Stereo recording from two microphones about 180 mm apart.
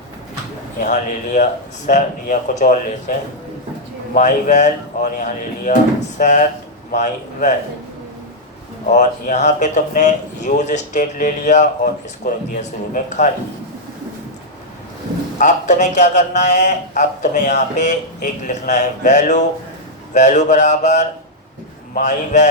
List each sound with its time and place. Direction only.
0.8 s a man's voice: 45° left (ahead or behind)
8.9 s speech: 45° left (ahead or behind)
15.4 s a man's voice: 40° left (ahead or behind)